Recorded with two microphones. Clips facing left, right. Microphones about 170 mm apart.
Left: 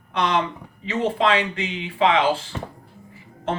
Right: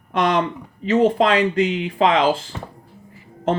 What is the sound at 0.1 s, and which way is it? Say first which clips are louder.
Speech: right 3 dB; 45° right (ahead or behind).